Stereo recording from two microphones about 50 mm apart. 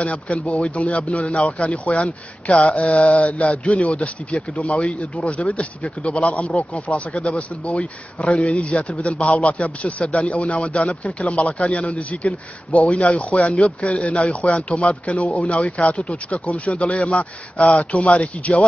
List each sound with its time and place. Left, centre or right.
0.0 s speech: left